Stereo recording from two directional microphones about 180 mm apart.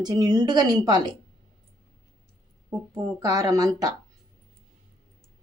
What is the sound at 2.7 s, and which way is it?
Speech, 15° right (ahead or behind).